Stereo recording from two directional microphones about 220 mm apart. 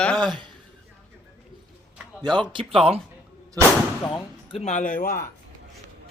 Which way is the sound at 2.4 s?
20° right (ahead or behind).